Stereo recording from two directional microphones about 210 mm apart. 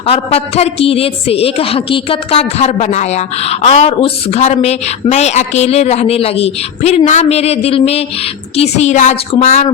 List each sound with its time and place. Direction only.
0.0 s a woman's voice: 30° left (ahead or behind)